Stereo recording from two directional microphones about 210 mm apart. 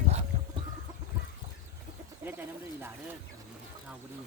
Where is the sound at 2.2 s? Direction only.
10° right (ahead or behind).